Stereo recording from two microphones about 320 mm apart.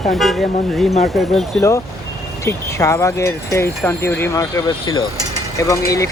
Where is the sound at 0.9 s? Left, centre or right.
Centre.